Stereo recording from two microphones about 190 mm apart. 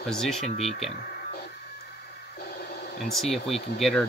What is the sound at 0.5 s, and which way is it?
Speech, 35° left (ahead or behind).